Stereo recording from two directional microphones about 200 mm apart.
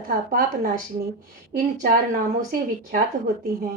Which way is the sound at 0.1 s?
45° right (ahead or behind).